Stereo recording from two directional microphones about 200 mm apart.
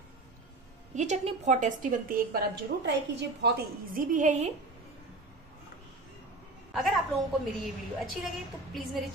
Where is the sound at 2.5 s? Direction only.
60° right (ahead or behind); by 4.5 s 35° right (ahead or behind).